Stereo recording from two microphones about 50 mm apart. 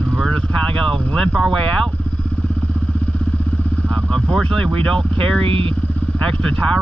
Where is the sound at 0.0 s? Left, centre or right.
Centre.